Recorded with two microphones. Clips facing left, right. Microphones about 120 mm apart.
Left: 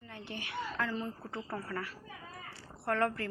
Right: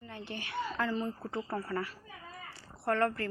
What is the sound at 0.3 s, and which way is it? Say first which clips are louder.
Speech: right 2 dB; 10° left (ahead or behind).